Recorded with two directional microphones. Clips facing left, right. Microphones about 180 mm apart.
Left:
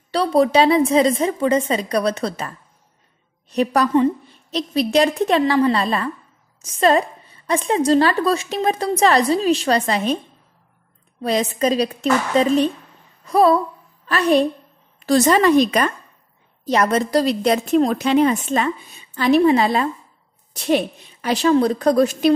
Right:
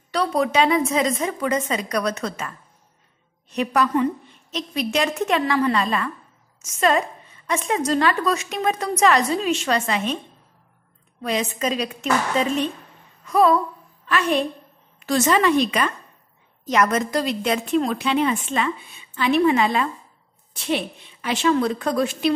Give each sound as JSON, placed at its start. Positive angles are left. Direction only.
{"t": 0.1, "sound": "a woman's voice", "side_deg": 30}
{"t": 11.2, "sound": "a woman's voice", "side_deg": 35}
{"t": 13.2, "sound": "a sound", "side_deg": 35}
{"t": 14.0, "sound": "a woman's voice", "side_deg": 35}